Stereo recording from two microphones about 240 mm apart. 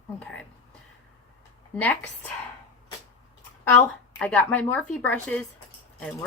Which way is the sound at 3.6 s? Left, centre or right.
Centre.